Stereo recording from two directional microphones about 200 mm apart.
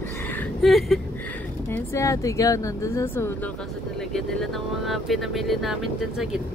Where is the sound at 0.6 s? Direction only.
Centre (ahead or behind).